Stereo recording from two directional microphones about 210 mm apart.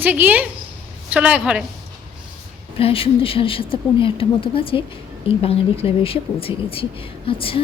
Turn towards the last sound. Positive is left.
turn(degrees=25)  # may be behind; listen again after turning